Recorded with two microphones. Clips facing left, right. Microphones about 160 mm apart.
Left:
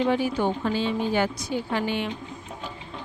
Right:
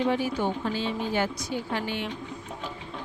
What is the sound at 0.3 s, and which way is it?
Speech, 65° left (ahead or behind).